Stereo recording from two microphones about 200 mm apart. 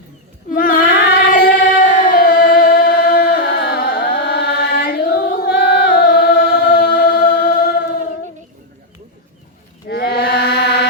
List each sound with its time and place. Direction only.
0.5 s female singing: 45° left (ahead or behind)
2.0 s music: 45° left (ahead or behind)
9.9 s chant: 55° left (ahead or behind)